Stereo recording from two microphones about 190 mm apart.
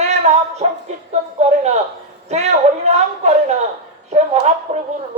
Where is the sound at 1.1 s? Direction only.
35° right (ahead or behind).